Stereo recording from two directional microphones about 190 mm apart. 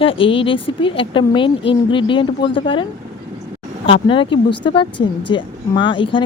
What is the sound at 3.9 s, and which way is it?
Speech, 25° left (ahead or behind).